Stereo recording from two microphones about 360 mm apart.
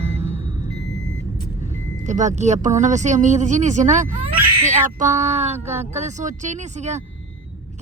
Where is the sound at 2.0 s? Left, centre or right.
Centre.